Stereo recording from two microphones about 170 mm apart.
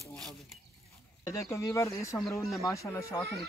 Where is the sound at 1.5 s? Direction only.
15° left (ahead or behind).